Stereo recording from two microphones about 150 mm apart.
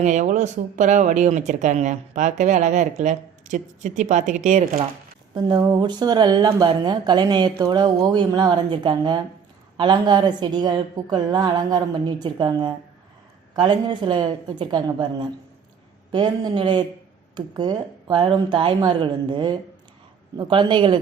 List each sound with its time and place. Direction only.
0.0 s speech: 50° right (ahead or behind)
5.3 s speech: 30° right (ahead or behind)